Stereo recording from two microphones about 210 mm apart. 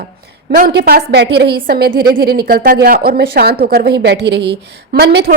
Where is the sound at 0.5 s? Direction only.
45° right (ahead or behind).